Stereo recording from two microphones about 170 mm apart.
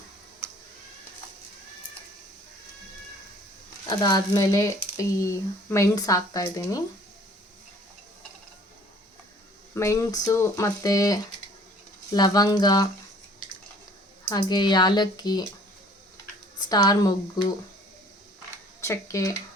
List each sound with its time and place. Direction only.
3.8 s speech: 25° left (ahead or behind)
9.7 s speech: 15° left (ahead or behind)
14.3 s speech: 25° left (ahead or behind)
16.6 s speech: 25° left (ahead or behind)
18.8 s speech: 15° left (ahead or behind)